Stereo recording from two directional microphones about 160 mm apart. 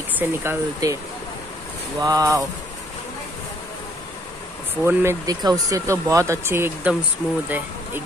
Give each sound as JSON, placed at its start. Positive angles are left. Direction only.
{"t": 0.2, "sound": "speech", "side_deg": -15}
{"t": 2.0, "sound": "speech", "side_deg": -20}
{"t": 4.8, "sound": "speech", "side_deg": -20}